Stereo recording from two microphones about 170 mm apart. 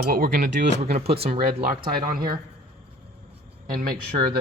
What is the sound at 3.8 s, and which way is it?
Speech, 60° right (ahead or behind).